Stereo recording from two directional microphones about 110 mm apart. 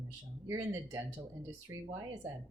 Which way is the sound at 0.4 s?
30° right (ahead or behind).